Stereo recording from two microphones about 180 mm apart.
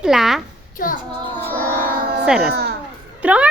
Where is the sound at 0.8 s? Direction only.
50° left (ahead or behind).